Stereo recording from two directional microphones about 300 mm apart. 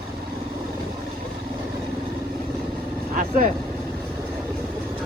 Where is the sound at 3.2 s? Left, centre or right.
Right.